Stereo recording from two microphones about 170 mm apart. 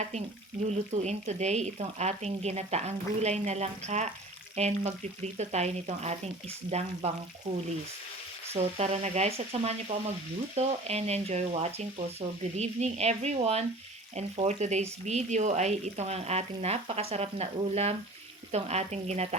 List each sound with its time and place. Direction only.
0.9 s speech: 40° right (ahead or behind)
8.5 s speech: 40° right (ahead or behind)